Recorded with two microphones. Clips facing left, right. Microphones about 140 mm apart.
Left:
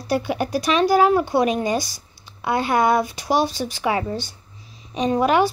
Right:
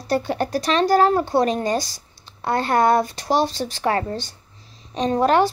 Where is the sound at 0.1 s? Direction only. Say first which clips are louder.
Even; 10° left (ahead or behind).